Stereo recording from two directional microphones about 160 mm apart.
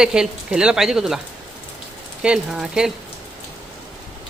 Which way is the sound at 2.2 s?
5° right (ahead or behind).